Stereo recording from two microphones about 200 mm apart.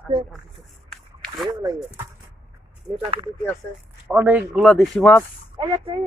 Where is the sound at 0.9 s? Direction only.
5° left (ahead or behind).